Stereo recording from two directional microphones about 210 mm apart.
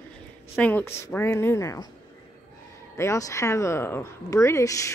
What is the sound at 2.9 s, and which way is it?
Speech, 15° left (ahead or behind).